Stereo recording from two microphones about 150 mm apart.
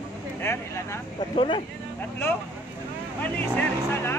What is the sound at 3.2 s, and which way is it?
Speech, 15° left (ahead or behind).